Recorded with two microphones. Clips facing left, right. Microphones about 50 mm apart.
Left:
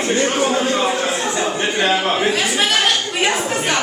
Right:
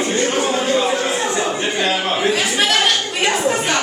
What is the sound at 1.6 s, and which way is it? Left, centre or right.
Speech, left.